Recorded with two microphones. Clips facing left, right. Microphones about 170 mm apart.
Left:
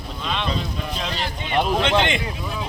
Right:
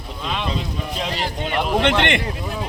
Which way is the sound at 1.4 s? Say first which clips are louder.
Right 1 dB; 65° right (ahead or behind).